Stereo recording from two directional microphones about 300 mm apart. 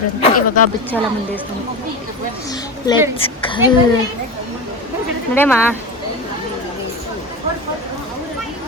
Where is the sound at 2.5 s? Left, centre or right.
Centre.